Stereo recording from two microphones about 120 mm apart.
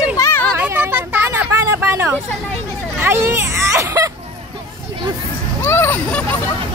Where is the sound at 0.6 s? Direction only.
20° right (ahead or behind).